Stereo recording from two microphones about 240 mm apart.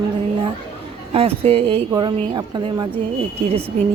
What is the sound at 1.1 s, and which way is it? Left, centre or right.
A woman's voice, right.